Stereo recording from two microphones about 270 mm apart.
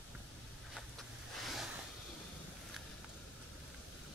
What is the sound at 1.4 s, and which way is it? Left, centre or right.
Ocean, centre.